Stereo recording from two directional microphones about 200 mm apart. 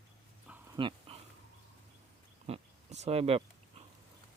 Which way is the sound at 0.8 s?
25° right (ahead or behind).